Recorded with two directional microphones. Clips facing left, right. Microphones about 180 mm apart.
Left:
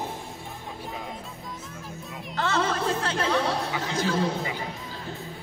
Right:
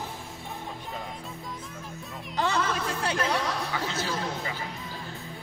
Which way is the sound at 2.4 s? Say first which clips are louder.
Right 1 dB; 15° right (ahead or behind).